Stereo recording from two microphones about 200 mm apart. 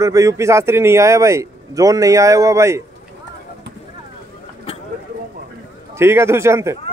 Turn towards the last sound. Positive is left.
turn(degrees=-15)  # may be behind; listen again after turning